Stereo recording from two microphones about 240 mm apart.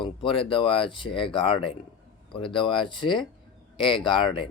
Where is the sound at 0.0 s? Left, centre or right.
Left.